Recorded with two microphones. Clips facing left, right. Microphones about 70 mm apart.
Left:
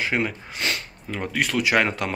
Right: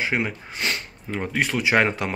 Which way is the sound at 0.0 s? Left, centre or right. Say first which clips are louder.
Even; right.